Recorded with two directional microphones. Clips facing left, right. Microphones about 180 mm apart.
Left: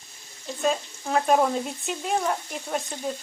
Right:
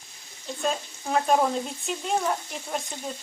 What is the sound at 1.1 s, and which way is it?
Frying, centre (ahead or behind).